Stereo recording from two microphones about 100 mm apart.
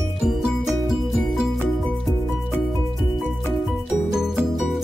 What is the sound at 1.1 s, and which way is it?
Music, centre (ahead or behind).